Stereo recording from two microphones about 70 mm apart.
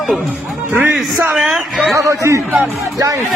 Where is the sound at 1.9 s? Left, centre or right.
Right.